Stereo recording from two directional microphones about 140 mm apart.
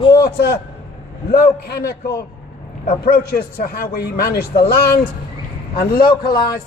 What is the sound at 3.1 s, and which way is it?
A man's voice, 90° left.